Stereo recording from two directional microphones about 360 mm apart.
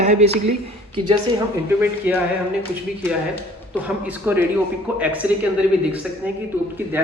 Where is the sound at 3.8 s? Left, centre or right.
Centre.